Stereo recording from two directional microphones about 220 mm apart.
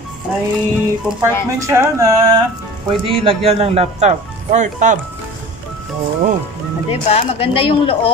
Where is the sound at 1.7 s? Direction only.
15° right (ahead or behind).